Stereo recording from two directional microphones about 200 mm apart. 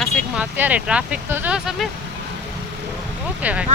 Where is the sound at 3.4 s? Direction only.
5° right (ahead or behind).